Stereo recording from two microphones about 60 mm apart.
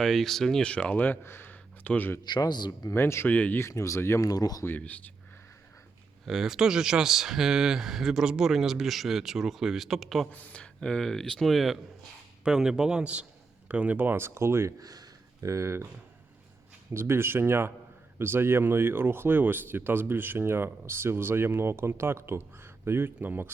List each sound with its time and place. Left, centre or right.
0.0 s speech: centre
0.6 s speech: centre
1.2 s a sound: left
2.9 s speech: left
3.2 s speech: left
3.6 s speech: left
4.2 s speech: left
4.8 s speech: left
6.2 s speech: centre
10.3 s speech: left; by 11.8 s centre
12.5 s speech: centre; by 14.7 s right
14.8 s a sound: right
16.9 s speech: right